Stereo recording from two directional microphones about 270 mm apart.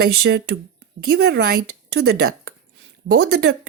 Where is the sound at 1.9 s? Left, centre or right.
Right.